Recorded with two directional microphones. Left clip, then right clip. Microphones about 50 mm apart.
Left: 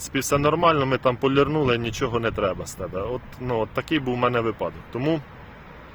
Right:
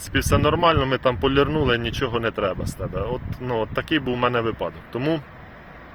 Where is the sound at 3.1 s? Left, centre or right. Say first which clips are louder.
Right 1 dB; left.